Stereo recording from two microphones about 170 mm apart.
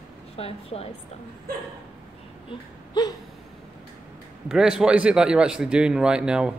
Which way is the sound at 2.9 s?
25° left (ahead or behind).